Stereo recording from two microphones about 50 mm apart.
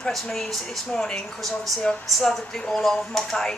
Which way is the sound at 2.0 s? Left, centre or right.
Centre.